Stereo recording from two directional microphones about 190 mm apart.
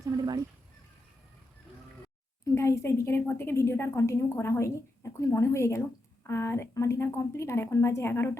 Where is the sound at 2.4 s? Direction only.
15° left (ahead or behind).